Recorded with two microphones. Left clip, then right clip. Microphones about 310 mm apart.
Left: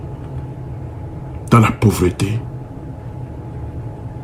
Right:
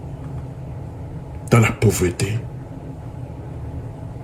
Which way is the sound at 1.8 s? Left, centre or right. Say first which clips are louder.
Left 2 dB; left.